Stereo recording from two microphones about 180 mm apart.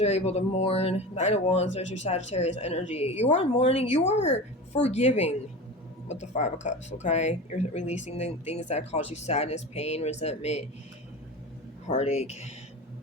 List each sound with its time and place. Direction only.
0.0 s speech: 35° left (ahead or behind)
11.9 s speech: 35° left (ahead or behind)